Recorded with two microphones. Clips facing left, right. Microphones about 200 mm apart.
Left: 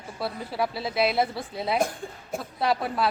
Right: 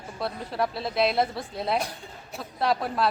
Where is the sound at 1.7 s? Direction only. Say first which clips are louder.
Left 4 dB; 50° left (ahead or behind).